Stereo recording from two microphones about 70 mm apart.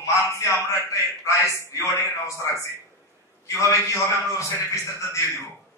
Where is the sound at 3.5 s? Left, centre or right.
Left.